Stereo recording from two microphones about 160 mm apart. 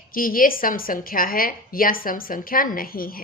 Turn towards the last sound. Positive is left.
turn(degrees=65)  # may be behind; listen again after turning